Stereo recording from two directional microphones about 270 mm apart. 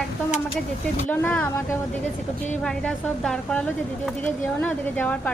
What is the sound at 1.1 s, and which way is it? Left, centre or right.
Speech, centre.